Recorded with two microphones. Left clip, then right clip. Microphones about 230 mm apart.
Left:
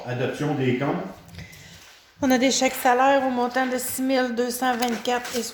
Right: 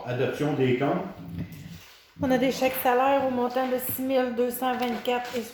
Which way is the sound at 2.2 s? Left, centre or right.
Left.